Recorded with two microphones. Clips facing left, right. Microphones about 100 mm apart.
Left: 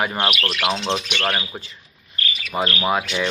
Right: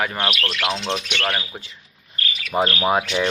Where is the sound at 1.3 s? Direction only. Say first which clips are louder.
Left 1 dB; 20° left (ahead or behind).